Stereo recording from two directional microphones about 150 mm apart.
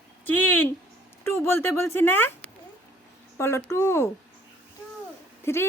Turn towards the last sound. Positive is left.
turn(degrees=15)  # may be behind; listen again after turning